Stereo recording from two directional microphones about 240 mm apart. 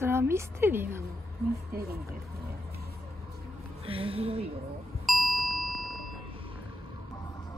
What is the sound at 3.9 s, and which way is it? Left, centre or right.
Speech, right.